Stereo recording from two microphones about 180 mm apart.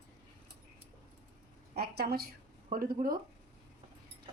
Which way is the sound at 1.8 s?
60° right (ahead or behind).